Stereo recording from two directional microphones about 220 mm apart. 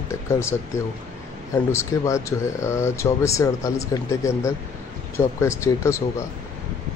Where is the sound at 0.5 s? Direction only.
10° left (ahead or behind).